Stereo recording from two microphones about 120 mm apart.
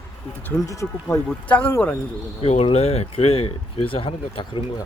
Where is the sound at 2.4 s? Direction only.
60° left (ahead or behind).